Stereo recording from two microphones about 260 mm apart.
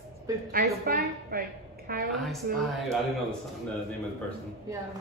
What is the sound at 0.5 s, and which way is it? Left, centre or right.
Music, right.